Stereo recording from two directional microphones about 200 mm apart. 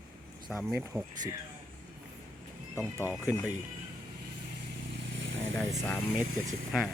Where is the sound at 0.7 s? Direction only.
5° right (ahead or behind).